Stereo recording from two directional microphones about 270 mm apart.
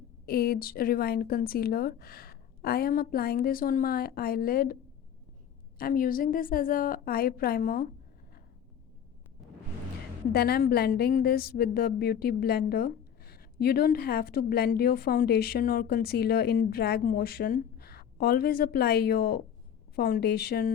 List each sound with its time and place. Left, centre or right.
0.3 s a woman's voice: left
5.8 s a woman's voice: left
10.3 s a woman's voice: left